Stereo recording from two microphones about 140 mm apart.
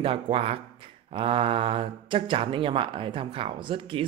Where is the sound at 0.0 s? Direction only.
40° right (ahead or behind).